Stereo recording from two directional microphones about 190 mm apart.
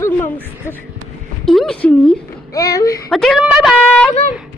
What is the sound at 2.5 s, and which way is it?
Speech, 20° left (ahead or behind).